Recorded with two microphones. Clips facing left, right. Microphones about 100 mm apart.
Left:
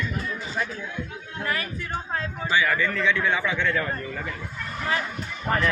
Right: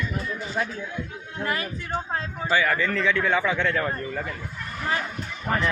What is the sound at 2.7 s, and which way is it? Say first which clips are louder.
Speech: even; 30° right (ahead or behind).